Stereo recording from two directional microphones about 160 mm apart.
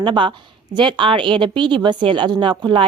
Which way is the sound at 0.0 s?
30° right (ahead or behind).